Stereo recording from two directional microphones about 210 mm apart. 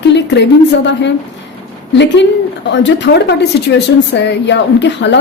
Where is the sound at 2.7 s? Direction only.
55° left (ahead or behind).